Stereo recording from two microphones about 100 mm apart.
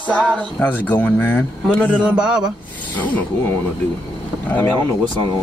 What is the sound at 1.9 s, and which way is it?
Speech, 10° right (ahead or behind).